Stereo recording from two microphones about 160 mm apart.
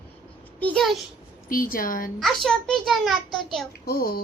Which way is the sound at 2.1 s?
Centre (ahead or behind).